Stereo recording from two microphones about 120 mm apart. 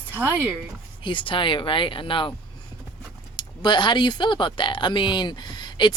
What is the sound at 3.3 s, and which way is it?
Speech, 40° left (ahead or behind).